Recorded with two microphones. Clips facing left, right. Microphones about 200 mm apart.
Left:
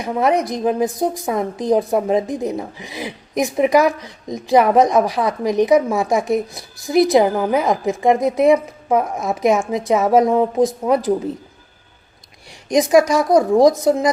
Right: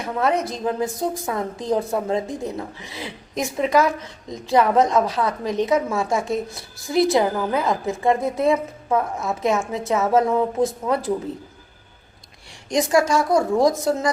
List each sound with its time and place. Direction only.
0.0 s a woman's voice: 15° left (ahead or behind)
12.6 s a woman's voice: 20° left (ahead or behind)